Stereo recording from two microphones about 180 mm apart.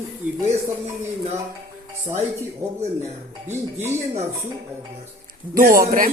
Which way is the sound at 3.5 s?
15° right (ahead or behind).